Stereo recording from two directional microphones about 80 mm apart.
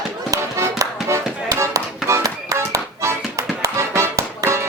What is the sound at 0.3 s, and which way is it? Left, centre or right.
Music, right.